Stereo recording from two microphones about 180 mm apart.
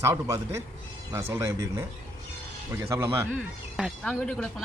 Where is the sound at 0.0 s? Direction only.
15° right (ahead or behind).